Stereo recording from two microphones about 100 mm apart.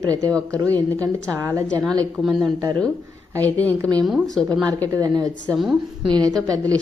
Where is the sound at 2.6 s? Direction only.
40° right (ahead or behind).